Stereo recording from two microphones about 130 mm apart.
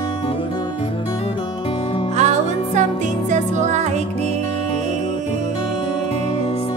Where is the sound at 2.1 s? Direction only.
60° right (ahead or behind).